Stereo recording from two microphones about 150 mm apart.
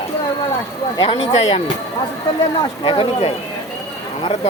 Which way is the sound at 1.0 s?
35° left (ahead or behind).